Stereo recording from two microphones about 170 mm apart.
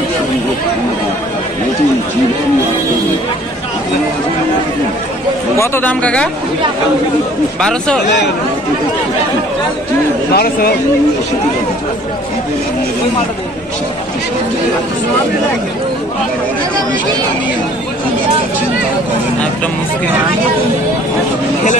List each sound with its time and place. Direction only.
5.6 s speech: 10° left (ahead or behind)
10.3 s speech: 60° left (ahead or behind)